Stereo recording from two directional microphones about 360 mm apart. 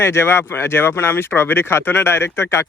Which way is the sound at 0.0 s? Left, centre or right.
Centre.